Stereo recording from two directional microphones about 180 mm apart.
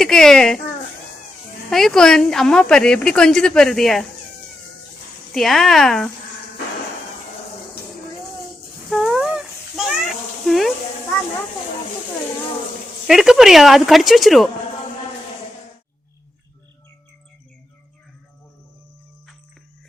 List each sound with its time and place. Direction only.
0.0 s a child's voice: 5° left (ahead or behind)
1.7 s speech: 5° left (ahead or behind)
5.3 s speech: centre (ahead or behind)
8.9 s a sound: 5° right (ahead or behind)
13.1 s speech: centre (ahead or behind)